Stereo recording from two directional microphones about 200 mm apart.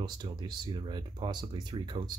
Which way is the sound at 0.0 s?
20° right (ahead or behind).